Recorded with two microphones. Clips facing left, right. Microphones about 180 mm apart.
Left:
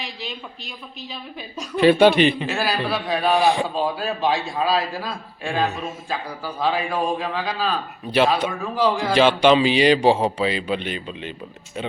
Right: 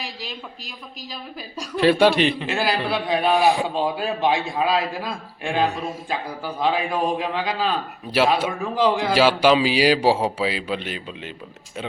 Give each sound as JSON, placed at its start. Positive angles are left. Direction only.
{"t": 1.7, "sound": "a man's voice", "side_deg": 0}
{"t": 2.5, "sound": "a man's voice", "side_deg": -20}
{"t": 3.3, "sound": "a man's voice", "side_deg": -5}
{"t": 3.8, "sound": "a man's voice", "side_deg": -20}
{"t": 9.1, "sound": "a man's voice", "side_deg": -5}